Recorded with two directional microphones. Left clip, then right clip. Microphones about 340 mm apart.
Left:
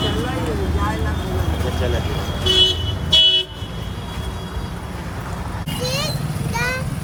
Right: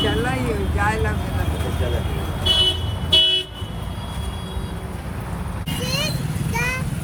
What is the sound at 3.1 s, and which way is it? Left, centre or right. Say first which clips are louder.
Vehicle: left 2 dB; right.